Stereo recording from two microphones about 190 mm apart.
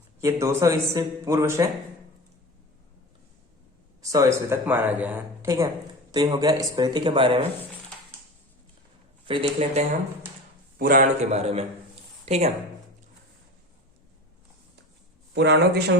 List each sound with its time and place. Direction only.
0.2 s speech: 15° right (ahead or behind)
4.0 s speech: 15° right (ahead or behind)
9.2 s a man's voice: 30° right (ahead or behind)
10.8 s a man's voice: 50° right (ahead or behind)
15.4 s a man's voice: 60° right (ahead or behind)